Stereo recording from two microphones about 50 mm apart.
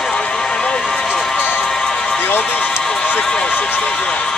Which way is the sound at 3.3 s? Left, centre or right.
Centre.